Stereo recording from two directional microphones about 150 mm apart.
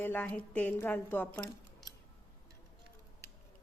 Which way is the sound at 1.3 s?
25° left (ahead or behind).